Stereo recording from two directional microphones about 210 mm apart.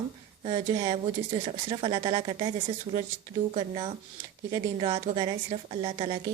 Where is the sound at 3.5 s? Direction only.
25° right (ahead or behind).